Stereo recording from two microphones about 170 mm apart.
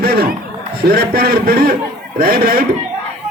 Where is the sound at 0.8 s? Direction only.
65° right (ahead or behind).